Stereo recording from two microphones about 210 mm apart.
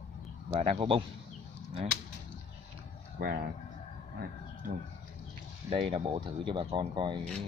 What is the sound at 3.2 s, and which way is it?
Speech, 50° right (ahead or behind).